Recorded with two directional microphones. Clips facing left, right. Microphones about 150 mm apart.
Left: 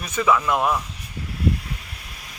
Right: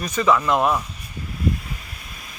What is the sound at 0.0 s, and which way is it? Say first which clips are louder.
Speech: right 1 dB; 5° left (ahead or behind).